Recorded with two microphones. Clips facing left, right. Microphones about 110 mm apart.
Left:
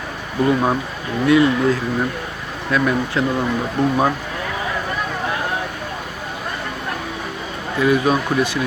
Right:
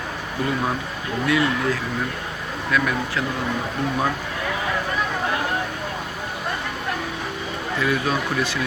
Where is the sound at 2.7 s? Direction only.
30° left (ahead or behind).